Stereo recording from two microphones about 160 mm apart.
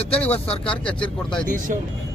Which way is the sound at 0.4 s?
40° left (ahead or behind).